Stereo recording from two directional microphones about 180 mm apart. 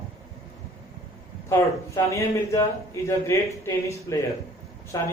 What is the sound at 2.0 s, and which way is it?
A man's voice, 15° left (ahead or behind).